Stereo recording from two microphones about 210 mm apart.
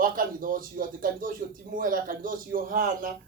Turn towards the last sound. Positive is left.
turn(degrees=-40)  # may be behind; listen again after turning